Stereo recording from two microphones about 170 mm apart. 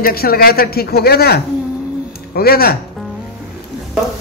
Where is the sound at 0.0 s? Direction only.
60° left (ahead or behind).